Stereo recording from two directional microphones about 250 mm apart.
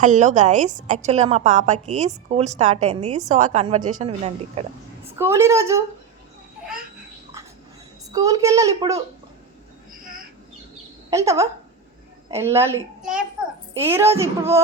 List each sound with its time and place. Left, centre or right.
0.0 s a woman's voice: right
5.1 s a child's voice: centre
8.1 s a child's voice: centre
11.1 s a child's voice: centre